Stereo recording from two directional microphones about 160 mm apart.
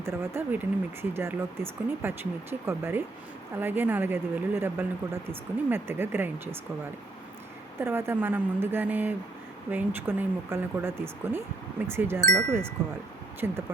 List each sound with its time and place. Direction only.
0.0 s speech: 15° right (ahead or behind)
7.8 s speech: 15° right (ahead or behind)
12.3 s speech: 5° left (ahead or behind)
12.8 s speech: 15° right (ahead or behind)